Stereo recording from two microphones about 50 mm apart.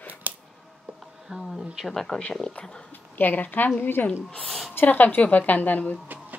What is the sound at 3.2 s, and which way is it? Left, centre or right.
A woman's voice, left.